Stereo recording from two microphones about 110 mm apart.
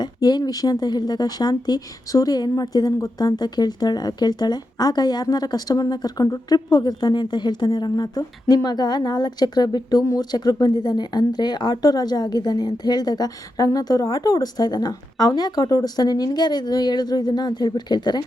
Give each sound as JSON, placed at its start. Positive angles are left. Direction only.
{"t": 0.0, "sound": "speech", "side_deg": 40}